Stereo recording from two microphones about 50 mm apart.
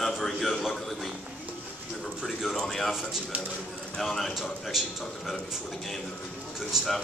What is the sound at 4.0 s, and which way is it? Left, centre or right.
A man's voice, centre.